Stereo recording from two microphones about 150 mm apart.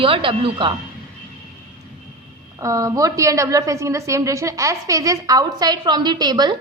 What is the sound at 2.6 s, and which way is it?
A woman's voice, 20° right (ahead or behind).